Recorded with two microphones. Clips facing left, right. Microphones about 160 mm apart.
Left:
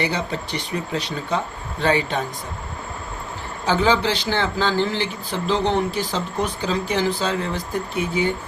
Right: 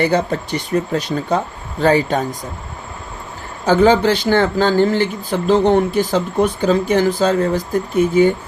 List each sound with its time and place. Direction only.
0.0 s speech: 50° right (ahead or behind)
3.7 s speech: 45° right (ahead or behind)